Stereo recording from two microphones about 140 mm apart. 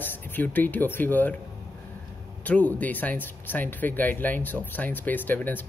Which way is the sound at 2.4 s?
10° left (ahead or behind).